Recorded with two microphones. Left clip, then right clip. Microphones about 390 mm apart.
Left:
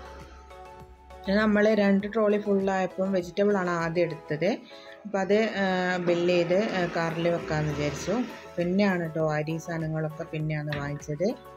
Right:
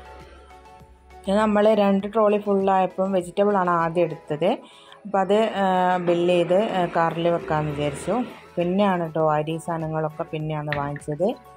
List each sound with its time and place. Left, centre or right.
1.2 s speech: centre